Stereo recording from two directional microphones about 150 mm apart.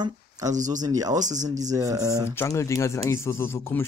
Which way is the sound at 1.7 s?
25° right (ahead or behind).